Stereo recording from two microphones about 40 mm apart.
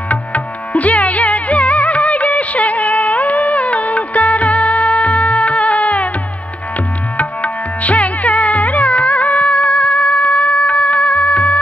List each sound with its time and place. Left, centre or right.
0.1 s music: left
7.2 s music: left